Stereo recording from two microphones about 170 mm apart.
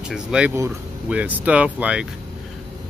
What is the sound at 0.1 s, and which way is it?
Speech, 5° right (ahead or behind).